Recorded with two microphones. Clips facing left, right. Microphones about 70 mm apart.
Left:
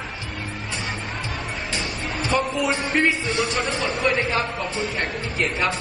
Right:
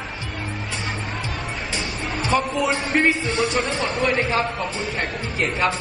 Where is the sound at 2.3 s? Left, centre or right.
Centre.